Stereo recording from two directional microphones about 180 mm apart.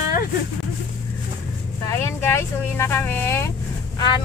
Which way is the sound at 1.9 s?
15° left (ahead or behind).